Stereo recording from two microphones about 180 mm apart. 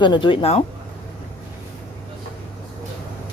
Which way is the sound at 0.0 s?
25° left (ahead or behind).